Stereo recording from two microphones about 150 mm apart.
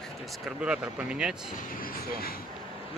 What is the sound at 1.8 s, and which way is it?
Speech, 80° left.